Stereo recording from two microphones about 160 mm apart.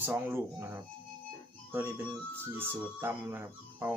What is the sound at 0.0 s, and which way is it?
Speech, 15° right (ahead or behind).